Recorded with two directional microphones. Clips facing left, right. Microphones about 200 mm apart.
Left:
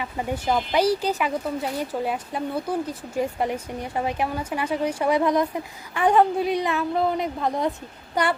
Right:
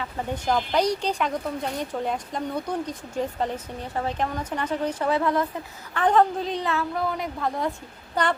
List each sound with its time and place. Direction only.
0.0 s a woman's voice: 10° left (ahead or behind)